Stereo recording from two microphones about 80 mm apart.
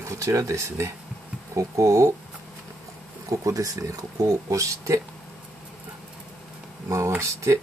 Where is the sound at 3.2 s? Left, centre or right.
Right.